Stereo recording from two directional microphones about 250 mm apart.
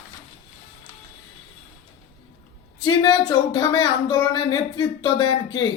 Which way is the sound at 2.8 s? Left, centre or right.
Centre.